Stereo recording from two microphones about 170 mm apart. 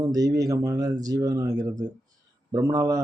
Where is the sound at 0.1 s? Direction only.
20° right (ahead or behind).